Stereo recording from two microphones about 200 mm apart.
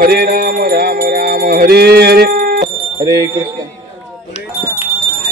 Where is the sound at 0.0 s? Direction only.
50° right (ahead or behind).